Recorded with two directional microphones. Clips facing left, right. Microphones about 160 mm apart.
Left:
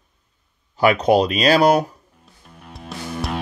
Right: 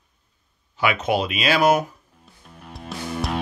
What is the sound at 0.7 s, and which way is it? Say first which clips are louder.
Speech: left 7 dB; 40° left (ahead or behind).